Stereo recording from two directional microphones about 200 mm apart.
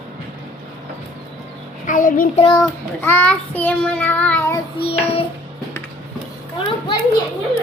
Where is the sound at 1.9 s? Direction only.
40° left (ahead or behind).